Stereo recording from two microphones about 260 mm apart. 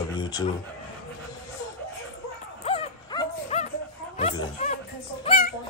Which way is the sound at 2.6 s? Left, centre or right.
Left.